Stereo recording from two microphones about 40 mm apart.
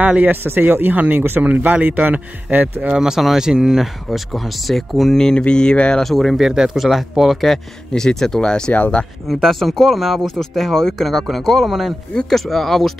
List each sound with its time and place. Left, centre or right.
0.0 s speech: right
0.3 s speech: right
1.4 s speech: right
3.2 s speech: centre
5.4 s speech: left
6.0 s speech: centre
6.4 s speech: centre
6.8 s speech: centre; by 8.7 s left
8.7 s speech: left
9.3 s speech: centre